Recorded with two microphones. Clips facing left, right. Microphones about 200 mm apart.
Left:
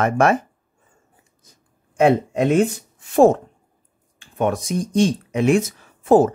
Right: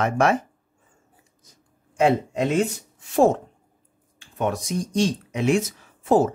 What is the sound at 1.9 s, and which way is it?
Speech, 55° left (ahead or behind).